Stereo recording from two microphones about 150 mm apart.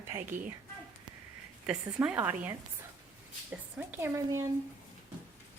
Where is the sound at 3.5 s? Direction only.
15° right (ahead or behind).